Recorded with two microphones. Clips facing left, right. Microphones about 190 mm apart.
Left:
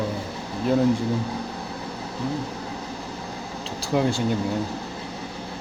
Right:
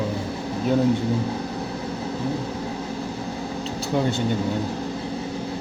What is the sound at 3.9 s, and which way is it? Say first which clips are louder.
Speech: left 1 dB; centre (ahead or behind).